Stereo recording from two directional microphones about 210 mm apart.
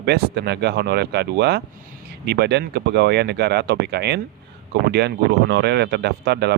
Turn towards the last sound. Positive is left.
turn(degrees=-50)  # may be behind; listen again after turning